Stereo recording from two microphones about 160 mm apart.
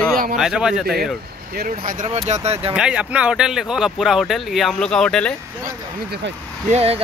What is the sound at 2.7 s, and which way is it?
Speech, 5° right (ahead or behind).